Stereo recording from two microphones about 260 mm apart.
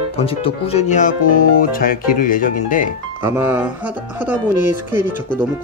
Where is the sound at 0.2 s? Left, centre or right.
Left.